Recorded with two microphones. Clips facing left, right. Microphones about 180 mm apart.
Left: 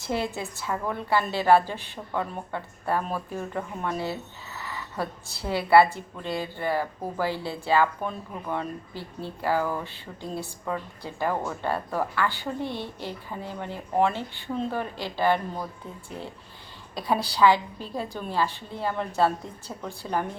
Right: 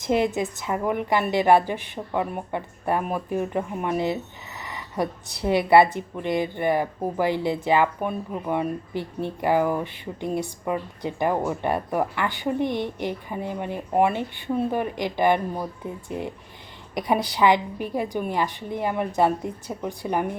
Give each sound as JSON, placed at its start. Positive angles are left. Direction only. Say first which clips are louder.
{"t": 0.0, "sound": "a woman's voice", "louder": "right 7 dB", "side_deg": -20}